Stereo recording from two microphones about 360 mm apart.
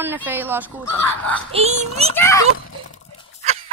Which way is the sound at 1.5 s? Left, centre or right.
Centre.